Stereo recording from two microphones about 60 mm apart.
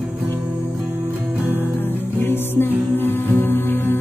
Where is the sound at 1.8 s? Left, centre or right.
Left.